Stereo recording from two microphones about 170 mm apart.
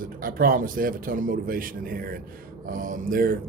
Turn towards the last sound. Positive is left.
turn(degrees=-55)  # may be behind; listen again after turning